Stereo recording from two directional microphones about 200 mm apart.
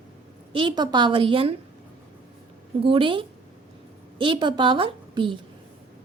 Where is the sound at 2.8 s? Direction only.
25° right (ahead or behind).